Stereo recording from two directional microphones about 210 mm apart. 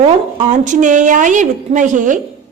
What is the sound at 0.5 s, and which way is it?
A woman's voice, 35° right (ahead or behind).